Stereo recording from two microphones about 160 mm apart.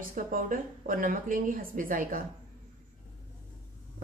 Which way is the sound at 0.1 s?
60° right (ahead or behind).